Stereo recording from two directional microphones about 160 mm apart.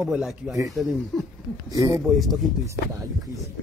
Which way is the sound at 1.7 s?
20° right (ahead or behind).